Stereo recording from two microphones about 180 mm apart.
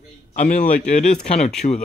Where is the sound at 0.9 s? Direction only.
40° left (ahead or behind).